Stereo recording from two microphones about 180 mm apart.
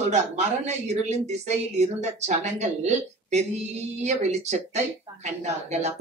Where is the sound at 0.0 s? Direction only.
40° right (ahead or behind).